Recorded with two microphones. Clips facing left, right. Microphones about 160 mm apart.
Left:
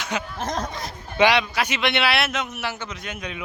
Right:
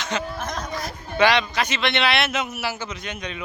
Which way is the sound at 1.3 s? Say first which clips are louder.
Even; 10° left (ahead or behind).